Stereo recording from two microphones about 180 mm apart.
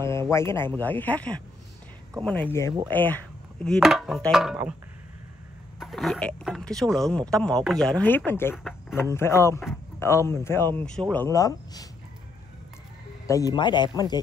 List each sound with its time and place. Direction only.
0.3 s speech: 15° left (ahead or behind); by 4.7 s 5° right (ahead or behind)
5.8 s speech: centre (ahead or behind); by 11.9 s 20° left (ahead or behind)
13.3 s speech: 20° left (ahead or behind)